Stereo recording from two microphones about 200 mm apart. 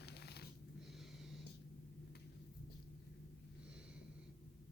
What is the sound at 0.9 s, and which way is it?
Snort, centre (ahead or behind).